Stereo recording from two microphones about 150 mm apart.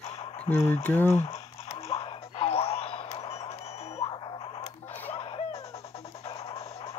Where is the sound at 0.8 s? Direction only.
15° left (ahead or behind).